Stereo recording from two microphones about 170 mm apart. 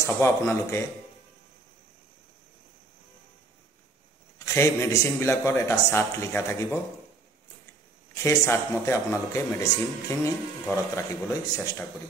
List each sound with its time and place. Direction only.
0.0 s a man's voice: 15° left (ahead or behind)
4.5 s a man's voice: 15° left (ahead or behind)
8.1 s a man's voice: 20° left (ahead or behind)